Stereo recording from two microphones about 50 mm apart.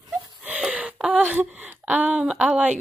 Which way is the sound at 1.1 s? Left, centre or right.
Right.